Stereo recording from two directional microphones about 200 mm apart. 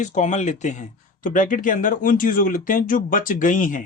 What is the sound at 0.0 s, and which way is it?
Speech, 35° left (ahead or behind).